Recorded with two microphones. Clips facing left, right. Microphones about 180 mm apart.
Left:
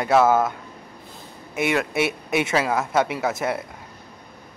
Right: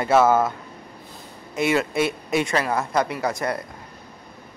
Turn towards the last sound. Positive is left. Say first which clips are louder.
# left 1 dB
turn(degrees=5)  # may be behind; listen again after turning